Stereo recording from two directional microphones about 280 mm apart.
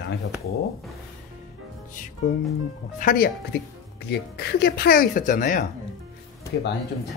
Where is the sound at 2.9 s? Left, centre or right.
Left.